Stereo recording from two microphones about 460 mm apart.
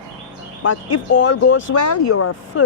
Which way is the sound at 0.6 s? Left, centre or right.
Left.